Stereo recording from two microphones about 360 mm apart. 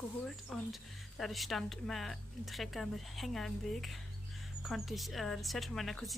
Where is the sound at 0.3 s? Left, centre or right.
Centre.